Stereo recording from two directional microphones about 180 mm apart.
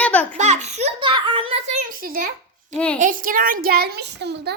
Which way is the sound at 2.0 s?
55° right (ahead or behind).